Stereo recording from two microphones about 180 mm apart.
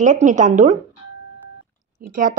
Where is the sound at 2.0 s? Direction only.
50° right (ahead or behind).